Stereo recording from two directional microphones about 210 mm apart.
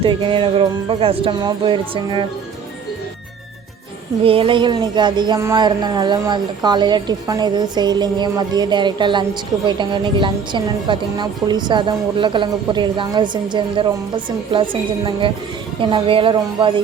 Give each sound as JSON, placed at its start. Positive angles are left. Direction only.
{"t": 0.0, "sound": "a woman's voice", "side_deg": -25}
{"t": 4.2, "sound": "a woman's voice", "side_deg": -25}